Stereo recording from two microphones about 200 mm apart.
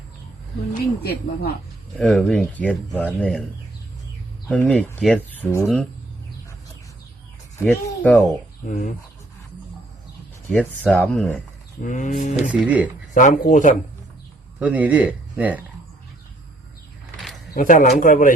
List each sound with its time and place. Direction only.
0.7 s speech: 50° left (ahead or behind)
2.0 s speech: centre (ahead or behind)
4.4 s speech: 5° left (ahead or behind)
7.6 s speech: 5° left (ahead or behind)
10.5 s speech: centre (ahead or behind)
11.8 s speech: 40° left (ahead or behind)
12.5 s speech: 5° right (ahead or behind)
13.1 s speech: 40° left (ahead or behind)
14.6 s speech: 5° right (ahead or behind)
17.5 s speech: 40° left (ahead or behind)